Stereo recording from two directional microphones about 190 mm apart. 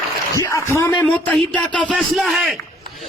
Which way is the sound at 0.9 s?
5° left (ahead or behind).